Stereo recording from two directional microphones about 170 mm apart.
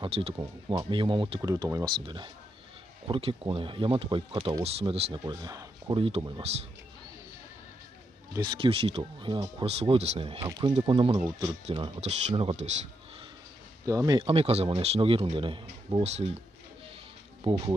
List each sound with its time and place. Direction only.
0.0 s speech: 35° right (ahead or behind)
0.3 s speech: 25° right (ahead or behind)
5.9 s speech: 35° right (ahead or behind)
8.3 s speech: 25° right (ahead or behind)
10.4 s speech: 25° right (ahead or behind); by 12.7 s 40° right (ahead or behind)
13.8 s speech: 20° right (ahead or behind)
17.4 s speech: 25° right (ahead or behind)